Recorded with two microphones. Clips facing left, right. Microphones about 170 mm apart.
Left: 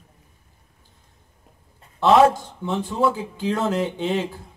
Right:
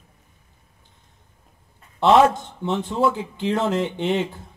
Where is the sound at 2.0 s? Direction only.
20° right (ahead or behind).